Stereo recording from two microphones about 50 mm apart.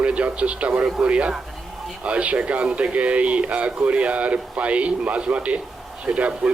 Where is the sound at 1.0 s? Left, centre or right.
Right.